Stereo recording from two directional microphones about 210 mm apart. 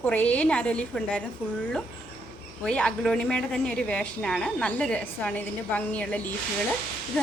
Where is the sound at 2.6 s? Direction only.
5° left (ahead or behind).